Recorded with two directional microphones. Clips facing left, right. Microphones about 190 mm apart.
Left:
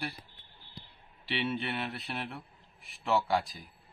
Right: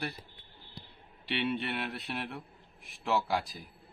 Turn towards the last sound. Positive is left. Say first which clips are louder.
# left 2 dB
turn(degrees=0)  # may be behind; listen again after turning